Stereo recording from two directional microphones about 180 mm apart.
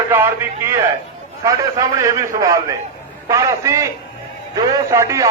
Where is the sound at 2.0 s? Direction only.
15° right (ahead or behind).